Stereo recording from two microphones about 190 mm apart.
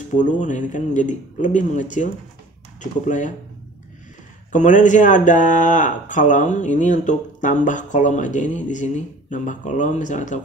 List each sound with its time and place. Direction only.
0.1 s speech: 40° left (ahead or behind)
4.5 s speech: 40° left (ahead or behind)